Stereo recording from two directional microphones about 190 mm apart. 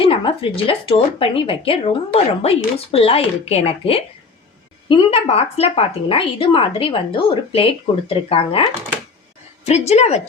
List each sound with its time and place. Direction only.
0.0 s speech: 25° left (ahead or behind)
9.6 s a woman's voice: 35° left (ahead or behind)